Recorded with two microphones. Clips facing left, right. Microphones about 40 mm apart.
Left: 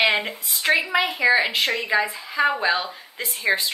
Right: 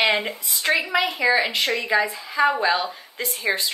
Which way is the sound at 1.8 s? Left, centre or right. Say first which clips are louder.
Right 1 dB; centre.